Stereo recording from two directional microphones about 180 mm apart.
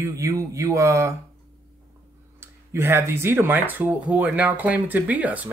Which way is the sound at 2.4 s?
15° right (ahead or behind).